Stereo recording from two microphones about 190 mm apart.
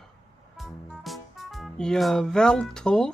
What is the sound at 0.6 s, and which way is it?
Music, centre (ahead or behind).